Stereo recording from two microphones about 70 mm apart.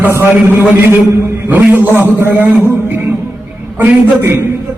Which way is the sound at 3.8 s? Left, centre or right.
Right.